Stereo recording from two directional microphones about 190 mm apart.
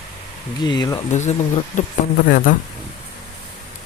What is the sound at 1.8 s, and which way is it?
Speech, 45° left (ahead or behind).